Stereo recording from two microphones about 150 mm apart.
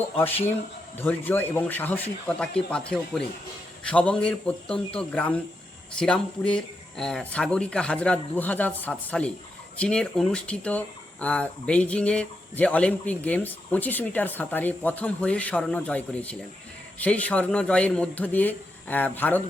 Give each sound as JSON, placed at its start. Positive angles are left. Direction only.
{"t": 0.9, "sound": "speech", "side_deg": 15}